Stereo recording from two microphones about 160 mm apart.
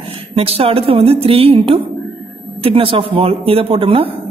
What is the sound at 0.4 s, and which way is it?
Speech, 35° right (ahead or behind).